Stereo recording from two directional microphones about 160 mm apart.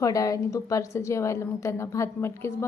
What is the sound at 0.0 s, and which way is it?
A woman's voice, 20° left (ahead or behind).